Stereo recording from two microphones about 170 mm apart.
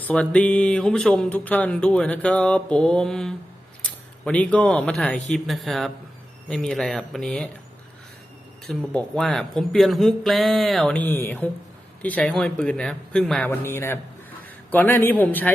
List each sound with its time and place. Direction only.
0.0 s speech: 5° left (ahead or behind)
8.6 s speech: 5° left (ahead or behind)
13.5 s a man's voice: 15° left (ahead or behind)